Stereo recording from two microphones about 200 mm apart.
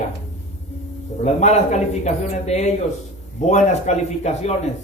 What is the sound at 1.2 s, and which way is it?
A man's voice, 35° left (ahead or behind).